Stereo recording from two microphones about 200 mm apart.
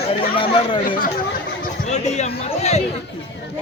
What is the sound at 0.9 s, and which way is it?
A man's voice, 45° left (ahead or behind).